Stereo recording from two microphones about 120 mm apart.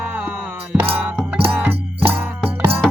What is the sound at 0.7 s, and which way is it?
Music, 15° right (ahead or behind).